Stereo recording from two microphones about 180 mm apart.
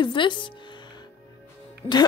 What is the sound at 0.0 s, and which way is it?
Music, 25° left (ahead or behind).